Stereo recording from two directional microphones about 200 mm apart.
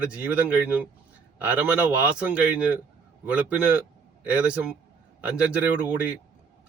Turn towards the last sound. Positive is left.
turn(degrees=-5)  # may be behind; listen again after turning